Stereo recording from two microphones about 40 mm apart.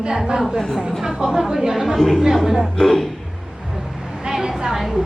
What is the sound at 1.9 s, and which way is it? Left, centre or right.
Speech, centre.